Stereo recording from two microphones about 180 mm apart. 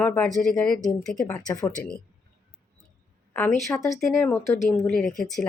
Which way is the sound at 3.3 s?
15° left (ahead or behind).